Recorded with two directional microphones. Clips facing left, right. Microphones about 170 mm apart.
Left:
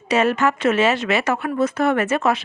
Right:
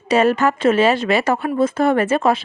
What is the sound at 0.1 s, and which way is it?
Speech, 35° right (ahead or behind).